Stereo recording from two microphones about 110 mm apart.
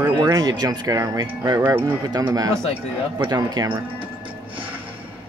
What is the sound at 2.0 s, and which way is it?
Speech, 35° right (ahead or behind).